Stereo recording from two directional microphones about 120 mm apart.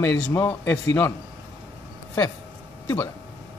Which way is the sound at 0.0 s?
10° left (ahead or behind).